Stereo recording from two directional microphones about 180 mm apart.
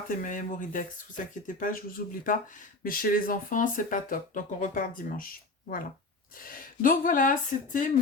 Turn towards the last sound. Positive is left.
turn(degrees=45)  # may be behind; listen again after turning